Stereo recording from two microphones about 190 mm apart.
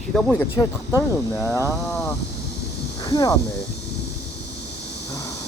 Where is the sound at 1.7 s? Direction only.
5° left (ahead or behind).